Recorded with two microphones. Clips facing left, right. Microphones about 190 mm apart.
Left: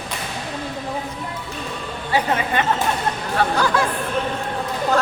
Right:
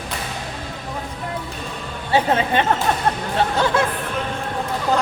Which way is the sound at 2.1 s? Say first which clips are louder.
Right 3 dB; 30° right (ahead or behind).